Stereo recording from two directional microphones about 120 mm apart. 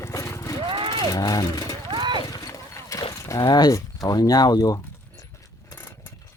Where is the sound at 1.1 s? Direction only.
30° left (ahead or behind).